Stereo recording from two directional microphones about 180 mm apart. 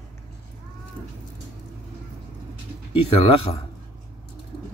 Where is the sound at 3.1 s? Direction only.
35° left (ahead or behind).